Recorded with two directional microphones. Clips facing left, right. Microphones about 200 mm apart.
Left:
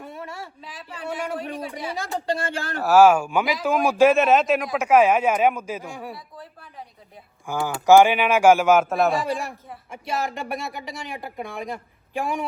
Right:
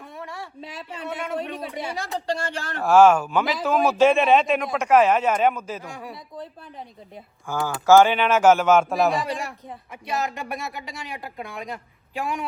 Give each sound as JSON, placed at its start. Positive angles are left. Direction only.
{"t": 0.6, "sound": "speech", "side_deg": -25}
{"t": 0.9, "sound": "a woman's voice", "side_deg": 0}
{"t": 6.3, "sound": "speech", "side_deg": -20}
{"t": 7.5, "sound": "a woman's voice", "side_deg": 15}